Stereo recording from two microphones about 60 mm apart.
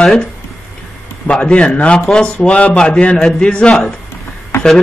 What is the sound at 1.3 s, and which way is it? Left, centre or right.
A man's voice, centre.